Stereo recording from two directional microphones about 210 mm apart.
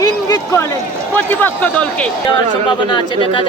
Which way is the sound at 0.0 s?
15° left (ahead or behind).